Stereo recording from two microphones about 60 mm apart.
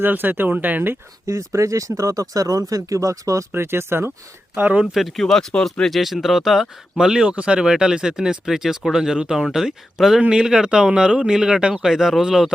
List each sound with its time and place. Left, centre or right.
0.0 s speech: right
1.3 s speech: right
3.5 s speech: right
4.5 s speech: right
4.9 s speech: centre